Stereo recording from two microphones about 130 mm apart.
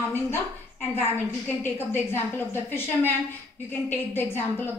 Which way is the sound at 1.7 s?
15° left (ahead or behind).